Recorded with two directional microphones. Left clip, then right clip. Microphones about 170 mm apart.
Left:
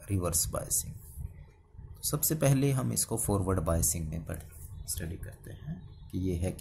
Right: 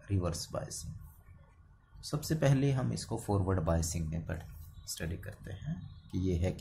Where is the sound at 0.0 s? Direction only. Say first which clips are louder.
Left 4 dB; 25° left (ahead or behind).